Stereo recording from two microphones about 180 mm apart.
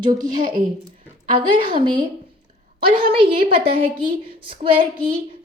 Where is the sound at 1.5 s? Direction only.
25° right (ahead or behind).